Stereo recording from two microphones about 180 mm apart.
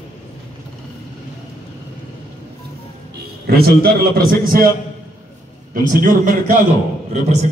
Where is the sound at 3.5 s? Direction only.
60° right (ahead or behind).